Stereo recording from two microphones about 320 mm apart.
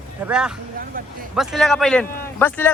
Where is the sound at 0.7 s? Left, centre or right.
Right.